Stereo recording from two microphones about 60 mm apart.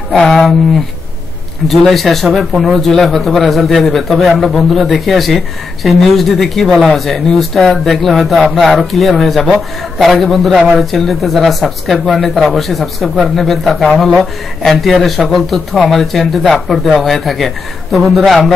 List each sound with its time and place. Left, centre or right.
0.3 s speech: centre
1.7 s speech: centre